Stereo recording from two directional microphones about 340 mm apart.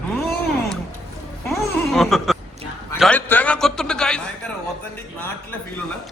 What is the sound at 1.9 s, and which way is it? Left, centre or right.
A man's voice, centre.